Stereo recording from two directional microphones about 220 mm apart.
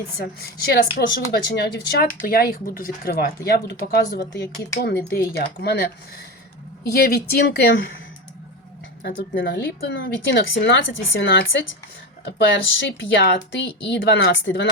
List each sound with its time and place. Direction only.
0.2 s speech: 45° left (ahead or behind)
9.0 s speech: 50° left (ahead or behind)
13.1 s speech: 50° left (ahead or behind)